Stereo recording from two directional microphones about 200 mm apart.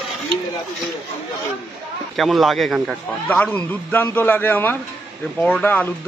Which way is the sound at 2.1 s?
Centre (ahead or behind).